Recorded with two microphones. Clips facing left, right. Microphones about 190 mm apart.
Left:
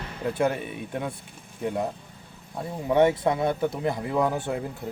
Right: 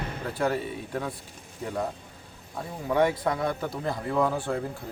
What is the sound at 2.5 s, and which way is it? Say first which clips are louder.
Speech: left 3 dB; 25° left (ahead or behind).